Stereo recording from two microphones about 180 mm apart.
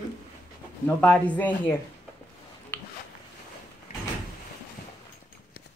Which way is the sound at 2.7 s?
10° left (ahead or behind).